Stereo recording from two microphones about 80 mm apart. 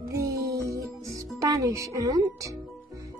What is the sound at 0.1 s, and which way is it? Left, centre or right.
Music, right.